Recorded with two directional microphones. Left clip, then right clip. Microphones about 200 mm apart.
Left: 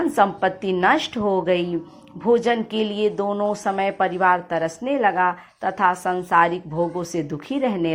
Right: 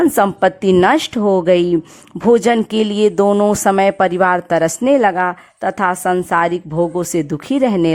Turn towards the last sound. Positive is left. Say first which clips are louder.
# right 8 dB
turn(degrees=-45)  # may be behind; listen again after turning